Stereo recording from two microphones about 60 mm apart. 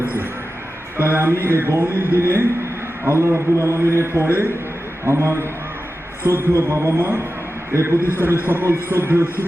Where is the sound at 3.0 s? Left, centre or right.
Right.